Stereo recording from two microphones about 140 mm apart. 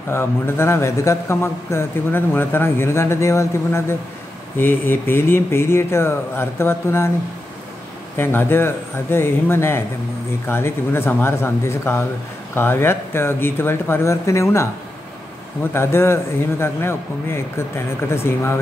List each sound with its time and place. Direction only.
0.1 s speech: 15° left (ahead or behind)
8.2 s speech: 15° left (ahead or behind)
15.7 s speech: 15° left (ahead or behind)